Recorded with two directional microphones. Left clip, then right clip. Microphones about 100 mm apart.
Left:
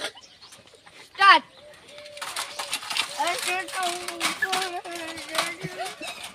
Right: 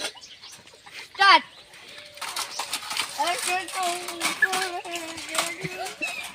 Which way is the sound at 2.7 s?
35° right (ahead or behind).